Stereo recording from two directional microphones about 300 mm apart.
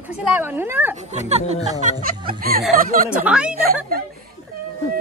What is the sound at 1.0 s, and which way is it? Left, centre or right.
Speech, right.